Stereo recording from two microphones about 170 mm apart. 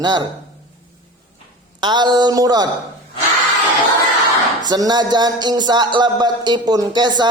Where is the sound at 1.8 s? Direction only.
25° right (ahead or behind).